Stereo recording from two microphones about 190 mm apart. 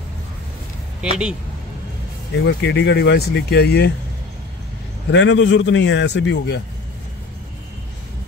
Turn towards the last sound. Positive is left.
turn(degrees=65)  # may be behind; listen again after turning